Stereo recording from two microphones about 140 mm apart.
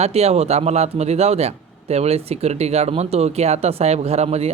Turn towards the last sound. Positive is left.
turn(degrees=-50)  # may be behind; listen again after turning